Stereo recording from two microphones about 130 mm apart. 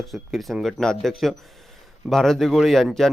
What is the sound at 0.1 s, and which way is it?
Speech, centre (ahead or behind).